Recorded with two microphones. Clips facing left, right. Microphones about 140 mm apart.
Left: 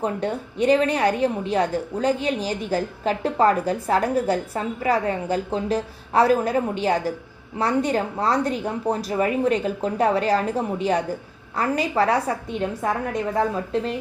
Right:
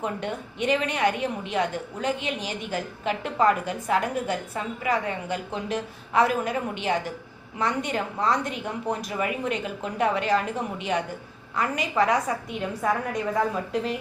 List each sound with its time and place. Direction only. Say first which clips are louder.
0.0 s a woman's voice: left 5 dB; 35° left (ahead or behind)